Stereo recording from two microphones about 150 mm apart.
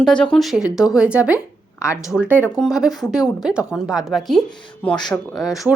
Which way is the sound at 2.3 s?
15° left (ahead or behind).